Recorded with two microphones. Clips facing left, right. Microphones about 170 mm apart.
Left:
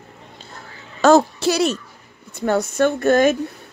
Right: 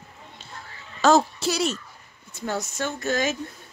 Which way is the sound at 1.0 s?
60° left (ahead or behind).